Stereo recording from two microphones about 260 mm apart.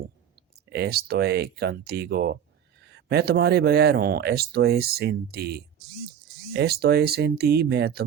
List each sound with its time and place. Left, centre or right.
0.7 s speech: right